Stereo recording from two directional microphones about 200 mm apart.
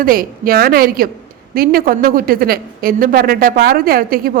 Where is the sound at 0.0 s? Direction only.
45° right (ahead or behind).